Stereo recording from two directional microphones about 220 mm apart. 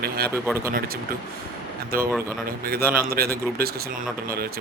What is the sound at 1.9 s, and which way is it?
Speech, 45° right (ahead or behind).